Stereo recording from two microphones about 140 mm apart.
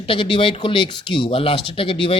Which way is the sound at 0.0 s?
40° left (ahead or behind).